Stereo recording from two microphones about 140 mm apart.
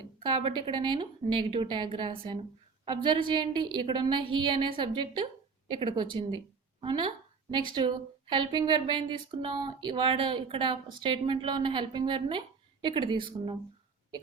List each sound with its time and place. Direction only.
0.2 s a woman's voice: 35° right (ahead or behind)
8.3 s a woman's voice: 35° right (ahead or behind)